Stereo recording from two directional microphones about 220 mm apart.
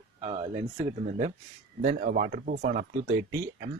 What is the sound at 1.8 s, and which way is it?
Speech, 35° right (ahead or behind).